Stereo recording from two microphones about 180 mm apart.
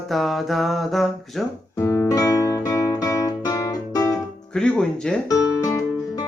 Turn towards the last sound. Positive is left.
turn(degrees=20)  # may be behind; listen again after turning